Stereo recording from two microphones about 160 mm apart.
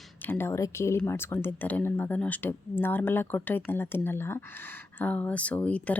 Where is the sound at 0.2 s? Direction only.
15° left (ahead or behind).